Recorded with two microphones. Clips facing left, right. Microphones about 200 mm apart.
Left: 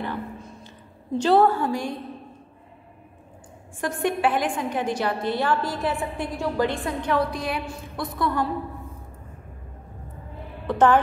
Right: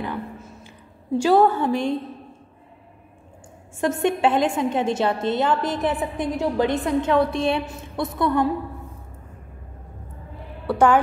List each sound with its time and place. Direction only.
0.4 s a sound: 10° right (ahead or behind)
3.8 s a woman's voice: 25° right (ahead or behind)
10.7 s speech: 10° right (ahead or behind)